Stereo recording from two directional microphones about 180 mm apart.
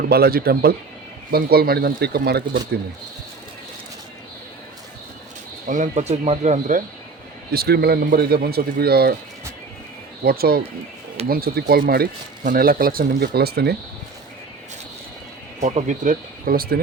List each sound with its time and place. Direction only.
0.1 s speech: 60° right (ahead or behind)
5.6 s speech: 45° right (ahead or behind)
7.5 s speech: 60° right (ahead or behind)
10.2 s speech: 55° right (ahead or behind)
15.6 s speech: 40° right (ahead or behind); by 16.8 s 55° right (ahead or behind)